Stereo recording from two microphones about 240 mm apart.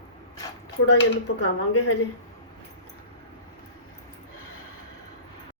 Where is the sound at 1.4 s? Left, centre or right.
Left.